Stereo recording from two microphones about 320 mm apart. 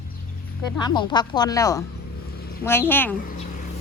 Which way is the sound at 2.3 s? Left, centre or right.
Left.